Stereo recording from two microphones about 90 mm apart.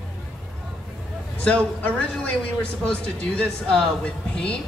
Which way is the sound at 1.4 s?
15° left (ahead or behind).